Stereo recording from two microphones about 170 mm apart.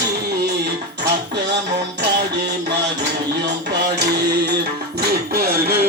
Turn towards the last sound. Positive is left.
turn(degrees=-65)  # may be behind; listen again after turning